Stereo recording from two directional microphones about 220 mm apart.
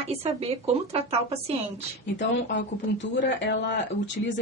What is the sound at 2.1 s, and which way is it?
Speech, 55° left (ahead or behind).